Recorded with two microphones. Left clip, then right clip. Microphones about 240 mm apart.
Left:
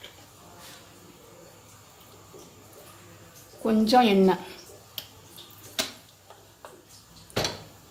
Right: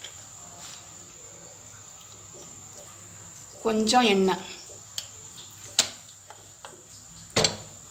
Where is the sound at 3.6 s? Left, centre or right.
Left.